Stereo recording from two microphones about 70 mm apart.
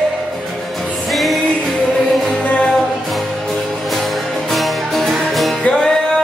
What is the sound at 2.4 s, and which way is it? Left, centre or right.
Music, centre.